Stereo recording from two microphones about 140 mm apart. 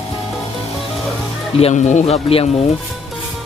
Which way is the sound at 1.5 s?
50° left (ahead or behind).